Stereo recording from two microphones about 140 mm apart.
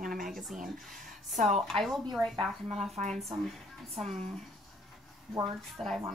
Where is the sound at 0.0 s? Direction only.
80° right.